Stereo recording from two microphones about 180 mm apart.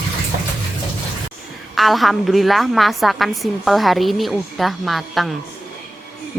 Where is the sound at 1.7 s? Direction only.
Centre (ahead or behind).